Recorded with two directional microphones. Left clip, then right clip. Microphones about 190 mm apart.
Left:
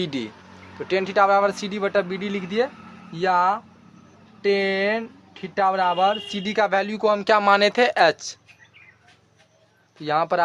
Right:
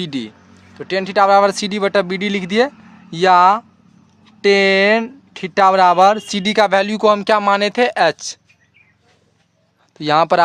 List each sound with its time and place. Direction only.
0.0 s speech: 35° right (ahead or behind)
10.0 s speech: 55° right (ahead or behind)